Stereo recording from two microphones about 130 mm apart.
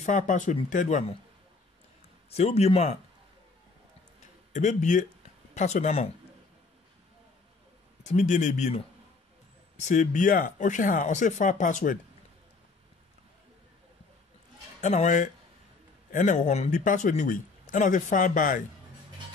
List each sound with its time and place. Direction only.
0.0 s speech: 80° left
2.3 s speech: 55° left (ahead or behind)
4.2 s a sound: 65° left (ahead or behind)
5.5 s speech: 60° left (ahead or behind)
8.0 s speech: 65° left (ahead or behind); by 12.0 s 85° left
14.8 s speech: 65° left (ahead or behind); by 18.6 s 90° left